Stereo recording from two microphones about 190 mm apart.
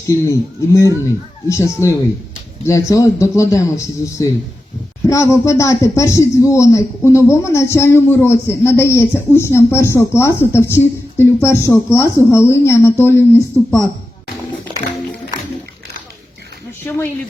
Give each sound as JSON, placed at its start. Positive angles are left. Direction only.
{"t": 0.1, "sound": "speech", "side_deg": 15}